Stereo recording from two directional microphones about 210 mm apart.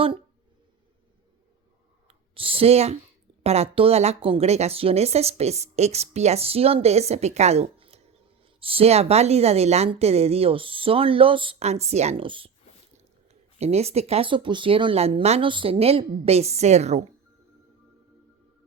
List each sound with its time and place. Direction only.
2.0 s a woman's voice: 25° right (ahead or behind)
13.6 s a woman's voice: 30° right (ahead or behind)